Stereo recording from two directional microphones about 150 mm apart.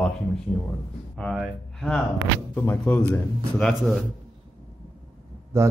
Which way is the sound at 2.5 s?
15° left (ahead or behind).